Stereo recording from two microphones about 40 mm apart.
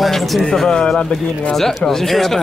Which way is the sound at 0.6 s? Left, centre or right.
Centre.